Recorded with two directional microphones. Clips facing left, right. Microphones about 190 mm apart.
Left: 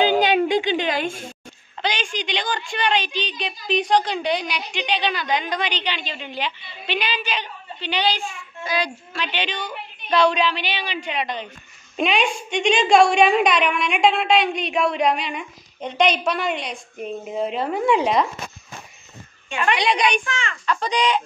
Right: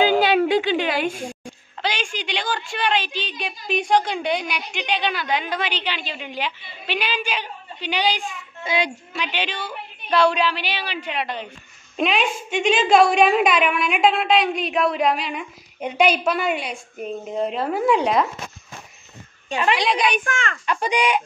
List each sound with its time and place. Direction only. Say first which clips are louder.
0.0 s a woman's voice: right 1 dB; 5° right (ahead or behind)
8.6 s a woman's voice: right 1 dB; 20° right (ahead or behind); by 18.3 s centre (ahead or behind)
19.7 s a woman's voice: left 1 dB; centre (ahead or behind)
20.2 s a child's voice: right 2 dB; 50° right (ahead or behind)
20.6 s a woman's voice: even; 15° right (ahead or behind)